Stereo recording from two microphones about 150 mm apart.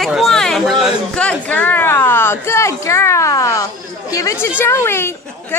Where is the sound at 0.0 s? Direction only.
Centre (ahead or behind).